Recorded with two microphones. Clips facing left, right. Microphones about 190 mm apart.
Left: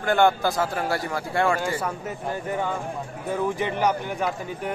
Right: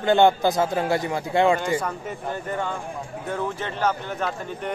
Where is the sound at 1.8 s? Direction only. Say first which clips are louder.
Even; 10° left (ahead or behind).